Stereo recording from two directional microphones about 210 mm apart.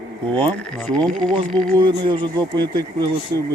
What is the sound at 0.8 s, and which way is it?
Speech, 5° left (ahead or behind).